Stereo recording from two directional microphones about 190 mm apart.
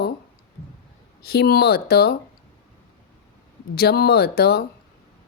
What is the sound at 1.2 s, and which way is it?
Speech, 55° left (ahead or behind).